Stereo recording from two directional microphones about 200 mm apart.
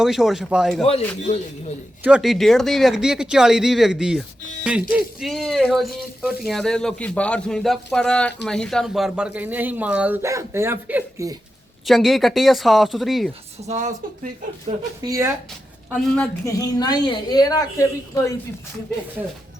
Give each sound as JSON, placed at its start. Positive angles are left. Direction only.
{"t": 0.0, "sound": "speech", "side_deg": 0}
{"t": 2.0, "sound": "a man's voice", "side_deg": -5}
{"t": 11.9, "sound": "speech", "side_deg": 0}
{"t": 13.7, "sound": "speech", "side_deg": -35}
{"t": 15.0, "sound": "a man's voice", "side_deg": -15}
{"t": 16.0, "sound": "speech", "side_deg": 5}
{"t": 16.5, "sound": "a woman's voice", "side_deg": 15}